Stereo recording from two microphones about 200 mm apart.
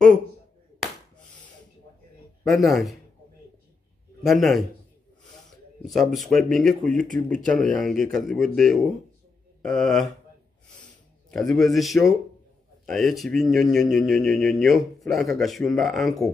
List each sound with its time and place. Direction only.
2.4 s speech: centre (ahead or behind)
4.2 s speech: centre (ahead or behind)
5.9 s speech: centre (ahead or behind)
7.3 s speech: 40° right (ahead or behind)
7.8 s speech: centre (ahead or behind)
11.2 s speech: centre (ahead or behind)